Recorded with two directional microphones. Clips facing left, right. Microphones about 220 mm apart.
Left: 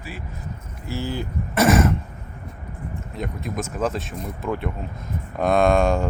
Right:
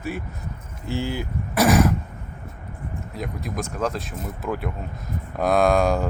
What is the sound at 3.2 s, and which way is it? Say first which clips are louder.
Speech: left 1 dB; centre (ahead or behind).